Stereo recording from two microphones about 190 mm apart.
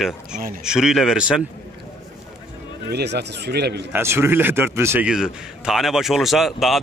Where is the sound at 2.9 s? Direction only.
60° right (ahead or behind).